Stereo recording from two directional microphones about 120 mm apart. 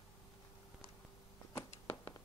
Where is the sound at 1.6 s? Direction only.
20° left (ahead or behind).